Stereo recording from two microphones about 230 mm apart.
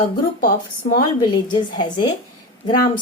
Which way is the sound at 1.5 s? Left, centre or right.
Centre.